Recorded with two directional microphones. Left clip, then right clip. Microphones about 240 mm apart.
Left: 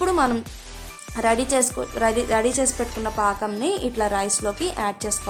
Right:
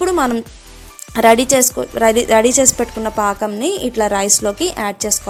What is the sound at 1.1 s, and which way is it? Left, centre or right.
A woman's voice, right.